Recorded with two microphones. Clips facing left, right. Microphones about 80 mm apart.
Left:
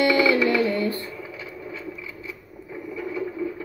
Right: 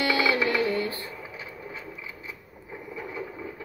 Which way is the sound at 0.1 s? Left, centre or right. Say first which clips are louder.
Left 5 dB; right.